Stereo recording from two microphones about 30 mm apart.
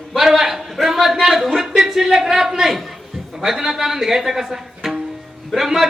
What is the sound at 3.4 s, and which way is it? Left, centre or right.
A woman's voice, centre.